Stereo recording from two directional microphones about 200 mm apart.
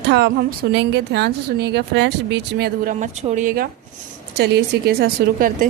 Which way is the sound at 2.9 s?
40° right (ahead or behind).